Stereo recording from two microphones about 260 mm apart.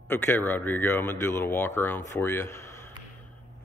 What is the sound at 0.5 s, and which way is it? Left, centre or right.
Speech, centre.